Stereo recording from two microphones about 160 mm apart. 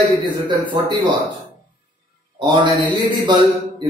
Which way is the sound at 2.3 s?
30° right (ahead or behind).